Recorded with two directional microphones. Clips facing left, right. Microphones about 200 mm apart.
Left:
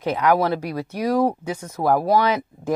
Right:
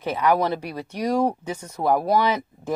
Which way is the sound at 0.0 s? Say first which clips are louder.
Left 2 dB; 15° left (ahead or behind).